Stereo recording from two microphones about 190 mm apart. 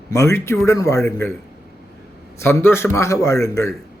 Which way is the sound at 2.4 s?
15° left (ahead or behind).